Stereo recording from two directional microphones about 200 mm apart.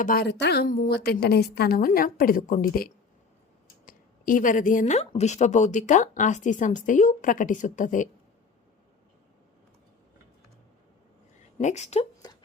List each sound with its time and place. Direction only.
0.0 s a woman's voice: 45° left (ahead or behind)
11.6 s speech: 35° left (ahead or behind)
12.2 s a sound: 20° left (ahead or behind)